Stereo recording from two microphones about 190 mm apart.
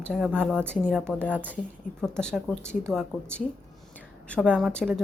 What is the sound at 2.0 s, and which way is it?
Speech, 5° left (ahead or behind).